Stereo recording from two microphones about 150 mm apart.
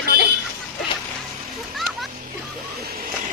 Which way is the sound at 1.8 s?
Centre (ahead or behind).